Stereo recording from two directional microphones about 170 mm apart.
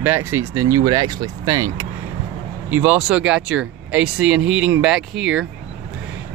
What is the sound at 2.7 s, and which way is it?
Speech, 10° right (ahead or behind).